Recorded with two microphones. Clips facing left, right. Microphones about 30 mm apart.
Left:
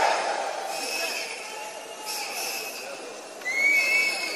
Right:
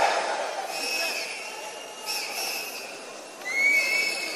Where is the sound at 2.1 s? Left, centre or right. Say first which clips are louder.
Right 1 dB; right.